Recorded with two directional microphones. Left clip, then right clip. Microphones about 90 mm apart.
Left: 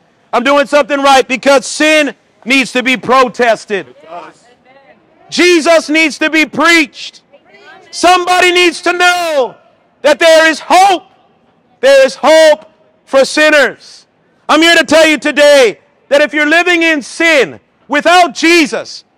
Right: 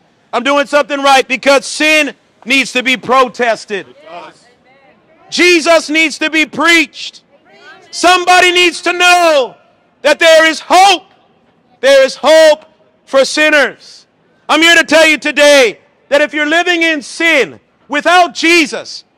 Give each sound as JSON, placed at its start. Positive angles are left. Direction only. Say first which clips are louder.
{"t": 0.3, "sound": "a man's voice", "louder": "left 2 dB", "side_deg": 45}
{"t": 4.1, "sound": "speech", "louder": "even", "side_deg": -10}
{"t": 5.3, "sound": "a man's voice", "louder": "even", "side_deg": 45}
{"t": 7.4, "sound": "a sound", "louder": "left 1 dB", "side_deg": -30}
{"t": 7.9, "sound": "a man's voice", "louder": "right 1 dB", "side_deg": 40}
{"t": 13.7, "sound": "a sound", "louder": "left 1 dB", "side_deg": 55}
{"t": 14.5, "sound": "a man's voice", "louder": "even", "side_deg": 35}
{"t": 15.7, "sound": "a man's voice", "louder": "left 2 dB", "side_deg": 45}